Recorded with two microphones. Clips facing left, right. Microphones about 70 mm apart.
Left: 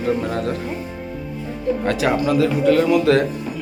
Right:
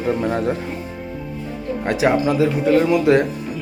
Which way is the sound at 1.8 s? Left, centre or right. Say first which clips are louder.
Right 3 dB; right.